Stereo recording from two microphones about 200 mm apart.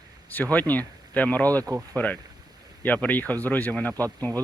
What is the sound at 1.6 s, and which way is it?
Speech, 20° right (ahead or behind).